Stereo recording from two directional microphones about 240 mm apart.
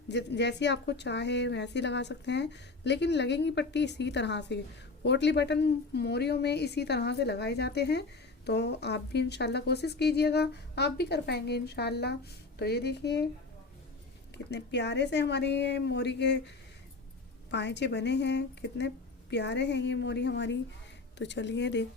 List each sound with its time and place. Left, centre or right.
0.1 s a woman's voice: left
14.3 s a woman's voice: left
17.5 s a woman's voice: left